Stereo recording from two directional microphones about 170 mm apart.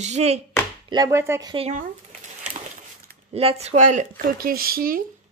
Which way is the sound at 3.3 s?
35° right (ahead or behind).